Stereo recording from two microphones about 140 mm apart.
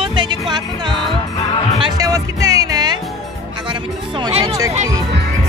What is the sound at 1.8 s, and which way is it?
Speech, 25° right (ahead or behind).